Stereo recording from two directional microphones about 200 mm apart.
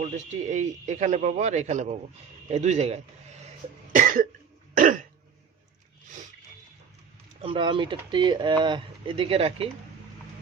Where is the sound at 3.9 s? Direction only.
40° right (ahead or behind).